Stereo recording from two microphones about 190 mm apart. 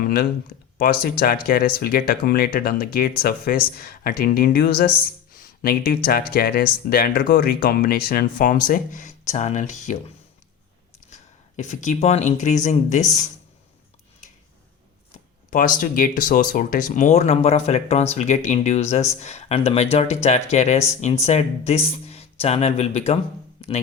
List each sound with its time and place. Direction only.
0.0 s speech: 50° left (ahead or behind)
11.1 s speech: 40° left (ahead or behind)
15.4 s speech: 45° left (ahead or behind)
23.6 s music: 30° left (ahead or behind)